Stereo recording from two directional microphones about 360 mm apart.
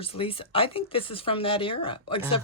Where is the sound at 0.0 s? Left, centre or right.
Centre.